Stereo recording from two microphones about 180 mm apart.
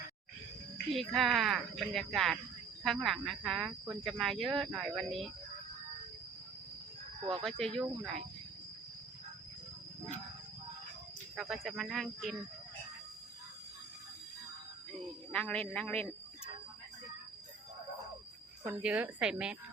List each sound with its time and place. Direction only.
0.9 s speech: centre (ahead or behind)
7.2 s speech: 30° right (ahead or behind)
7.8 s speech: centre (ahead or behind)
11.3 s speech: centre (ahead or behind)
15.3 s a man's voice: 5° left (ahead or behind)
18.6 s speech: 5° right (ahead or behind)